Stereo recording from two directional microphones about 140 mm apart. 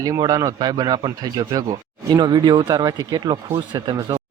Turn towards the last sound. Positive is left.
turn(degrees=-30)  # may be behind; listen again after turning